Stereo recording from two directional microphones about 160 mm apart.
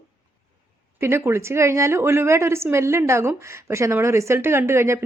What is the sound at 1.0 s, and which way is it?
A woman's voice, 15° right (ahead or behind).